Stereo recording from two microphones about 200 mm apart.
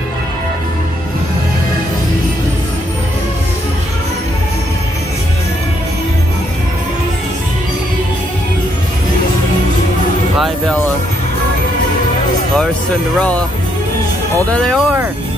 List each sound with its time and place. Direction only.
14.5 s speech: 5° left (ahead or behind)